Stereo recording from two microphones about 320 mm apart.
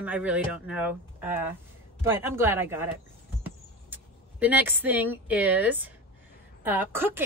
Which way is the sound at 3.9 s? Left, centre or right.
Centre.